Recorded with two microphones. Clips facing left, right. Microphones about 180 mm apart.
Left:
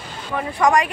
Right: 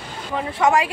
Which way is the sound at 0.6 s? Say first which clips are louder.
Left 1 dB; 5° right (ahead or behind).